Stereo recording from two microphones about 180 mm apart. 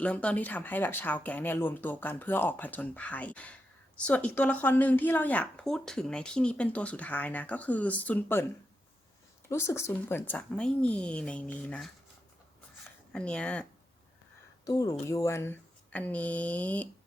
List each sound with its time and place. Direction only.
0.0 s a woman's voice: 5° left (ahead or behind)
9.5 s a woman's voice: 15° left (ahead or behind)
13.1 s a woman's voice: 5° left (ahead or behind)
14.6 s a woman's voice: 20° left (ahead or behind)